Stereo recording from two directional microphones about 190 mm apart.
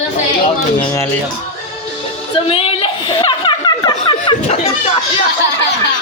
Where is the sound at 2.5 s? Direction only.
30° left (ahead or behind).